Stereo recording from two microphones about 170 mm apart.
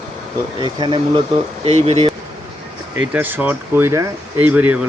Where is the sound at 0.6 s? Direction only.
30° right (ahead or behind).